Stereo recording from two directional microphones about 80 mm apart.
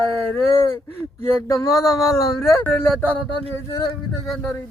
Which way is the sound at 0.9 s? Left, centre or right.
Left.